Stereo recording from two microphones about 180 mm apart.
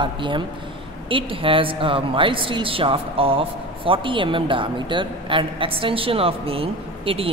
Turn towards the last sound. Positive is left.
turn(degrees=-30)  # may be behind; listen again after turning